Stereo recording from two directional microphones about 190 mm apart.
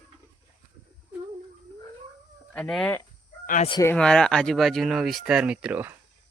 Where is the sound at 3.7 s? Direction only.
15° left (ahead or behind).